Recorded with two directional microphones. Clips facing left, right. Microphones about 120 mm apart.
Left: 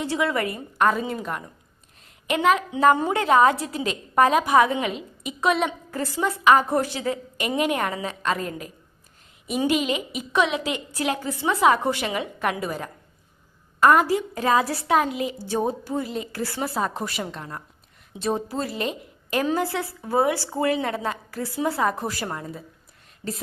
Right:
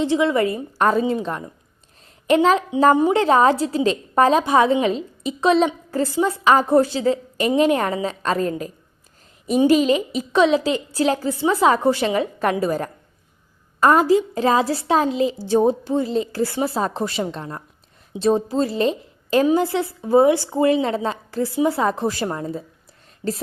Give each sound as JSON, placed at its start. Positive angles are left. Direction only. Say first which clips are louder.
{"t": 0.0, "sound": "a woman's voice", "louder": "right 6 dB", "side_deg": -25}
{"t": 2.9, "sound": "a woman's voice", "louder": "right 5 dB", "side_deg": -20}
{"t": 13.8, "sound": "a woman's voice", "louder": "right 3 dB", "side_deg": -25}